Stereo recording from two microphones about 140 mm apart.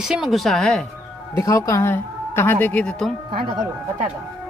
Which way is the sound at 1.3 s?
25° left (ahead or behind).